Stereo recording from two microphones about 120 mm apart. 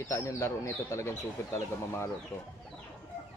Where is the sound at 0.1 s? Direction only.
25° left (ahead or behind).